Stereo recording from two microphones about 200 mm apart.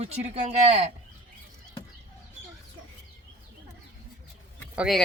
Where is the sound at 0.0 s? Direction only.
35° right (ahead or behind).